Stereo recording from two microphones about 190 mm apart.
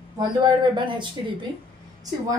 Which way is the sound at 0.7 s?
25° right (ahead or behind).